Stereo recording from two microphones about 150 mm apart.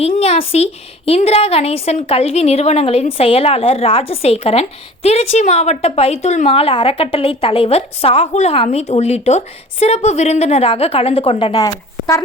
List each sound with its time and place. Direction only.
0.0 s a woman's voice: 45° left (ahead or behind)
11.5 s speech: 25° left (ahead or behind)